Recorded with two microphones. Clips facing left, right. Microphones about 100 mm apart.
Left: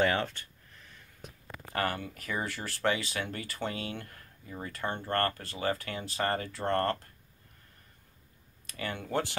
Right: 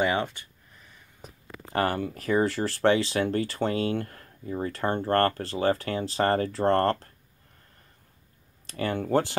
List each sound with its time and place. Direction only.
0.0 s speech: 10° right (ahead or behind)
1.2 s speech: 30° right (ahead or behind)
8.6 s speech: 40° right (ahead or behind)